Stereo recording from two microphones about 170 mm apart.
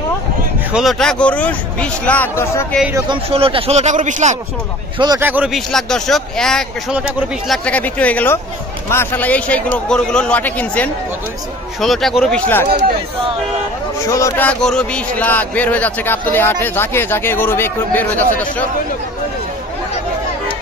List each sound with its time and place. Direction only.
0.7 s a man's voice: centre (ahead or behind)
3.1 s speech: 35° right (ahead or behind)
4.9 s a man's voice: 25° right (ahead or behind)
5.2 s a man's voice: 10° right (ahead or behind); by 12.6 s 10° left (ahead or behind)
14.0 s speech: 20° left (ahead or behind)
14.5 s a man's voice: 5° left (ahead or behind)